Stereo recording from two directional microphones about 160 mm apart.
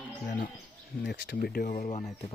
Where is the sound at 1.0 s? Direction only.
90° left; by 2.1 s 50° left (ahead or behind).